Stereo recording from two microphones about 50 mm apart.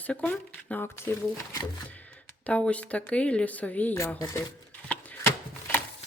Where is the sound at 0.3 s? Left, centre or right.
Left.